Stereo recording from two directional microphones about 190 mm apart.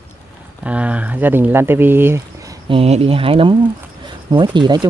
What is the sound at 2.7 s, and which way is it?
Speech, 30° right (ahead or behind).